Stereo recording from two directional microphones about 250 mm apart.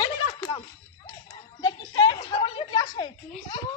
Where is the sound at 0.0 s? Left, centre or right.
Centre.